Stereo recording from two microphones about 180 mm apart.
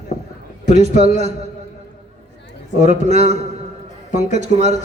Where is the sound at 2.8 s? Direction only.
40° right (ahead or behind).